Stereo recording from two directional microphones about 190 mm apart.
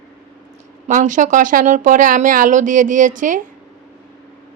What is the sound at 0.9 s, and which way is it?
Speech, 40° right (ahead or behind).